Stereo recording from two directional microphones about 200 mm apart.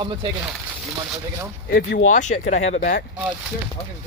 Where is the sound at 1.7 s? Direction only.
55° left (ahead or behind).